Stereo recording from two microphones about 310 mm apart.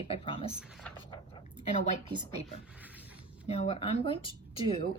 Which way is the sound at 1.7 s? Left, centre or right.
Left.